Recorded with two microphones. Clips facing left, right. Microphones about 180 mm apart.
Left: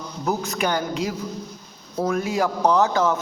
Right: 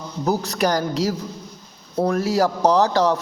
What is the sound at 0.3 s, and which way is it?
A man's voice, 35° right (ahead or behind).